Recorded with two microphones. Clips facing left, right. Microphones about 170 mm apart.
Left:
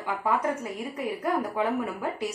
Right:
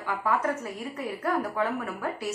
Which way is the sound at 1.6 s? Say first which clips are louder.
Left 2 dB; 15° left (ahead or behind).